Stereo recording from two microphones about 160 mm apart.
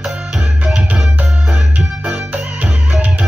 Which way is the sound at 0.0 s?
Centre (ahead or behind).